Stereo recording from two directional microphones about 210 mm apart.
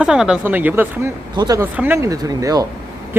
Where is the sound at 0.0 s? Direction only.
5° right (ahead or behind).